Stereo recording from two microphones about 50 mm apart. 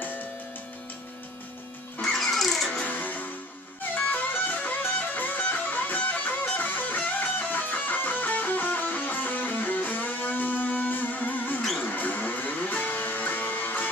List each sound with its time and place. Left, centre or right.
2.0 s music: centre
2.8 s music: left